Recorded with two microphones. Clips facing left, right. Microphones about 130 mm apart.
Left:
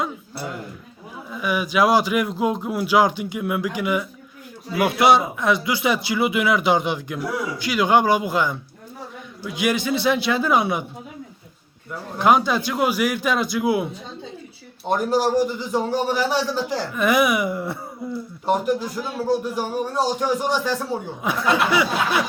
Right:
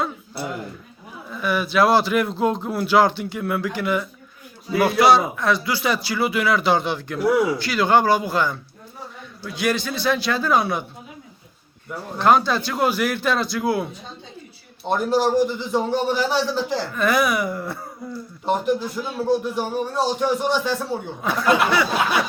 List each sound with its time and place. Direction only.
1.3 s speech: 10° left (ahead or behind)
12.1 s speech: 15° left (ahead or behind)
14.8 s speech: 10° left (ahead or behind)
18.4 s speech: 10° left (ahead or behind)